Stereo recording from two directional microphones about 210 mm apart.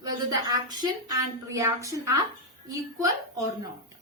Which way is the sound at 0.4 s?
20° right (ahead or behind).